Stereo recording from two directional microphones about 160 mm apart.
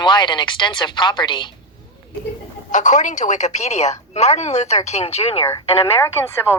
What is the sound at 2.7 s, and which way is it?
A woman's voice, 50° left (ahead or behind).